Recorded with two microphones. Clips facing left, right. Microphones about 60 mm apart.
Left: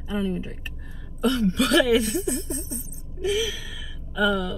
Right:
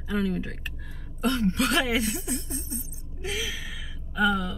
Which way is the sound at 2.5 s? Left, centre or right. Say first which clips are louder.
Left 3 dB; left.